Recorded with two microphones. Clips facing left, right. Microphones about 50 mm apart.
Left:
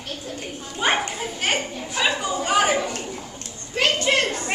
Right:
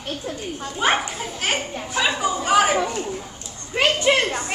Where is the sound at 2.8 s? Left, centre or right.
Right.